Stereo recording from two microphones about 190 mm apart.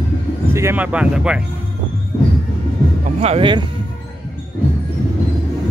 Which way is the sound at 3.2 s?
30° right (ahead or behind).